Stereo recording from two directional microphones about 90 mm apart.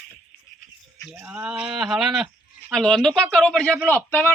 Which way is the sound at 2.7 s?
5° left (ahead or behind).